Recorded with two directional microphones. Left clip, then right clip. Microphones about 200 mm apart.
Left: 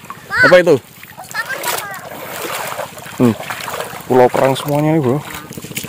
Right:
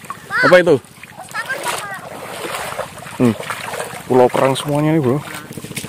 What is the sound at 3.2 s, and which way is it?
Speech, 20° left (ahead or behind).